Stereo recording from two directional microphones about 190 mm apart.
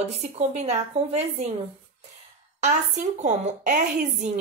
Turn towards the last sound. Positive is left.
turn(degrees=-40)  # may be behind; listen again after turning